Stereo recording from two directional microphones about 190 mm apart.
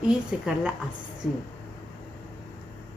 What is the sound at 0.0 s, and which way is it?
Speech, 5° right (ahead or behind).